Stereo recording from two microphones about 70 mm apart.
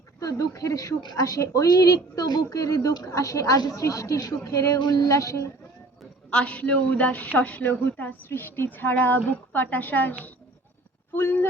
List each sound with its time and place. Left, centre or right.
0.2 s a woman's voice: left
4.8 s a woman's voice: left
6.3 s a man's voice: centre; by 11.4 s left